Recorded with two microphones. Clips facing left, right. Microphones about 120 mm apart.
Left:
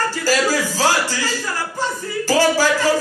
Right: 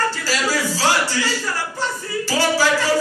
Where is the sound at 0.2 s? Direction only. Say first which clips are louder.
Left 4 dB; 45° left (ahead or behind).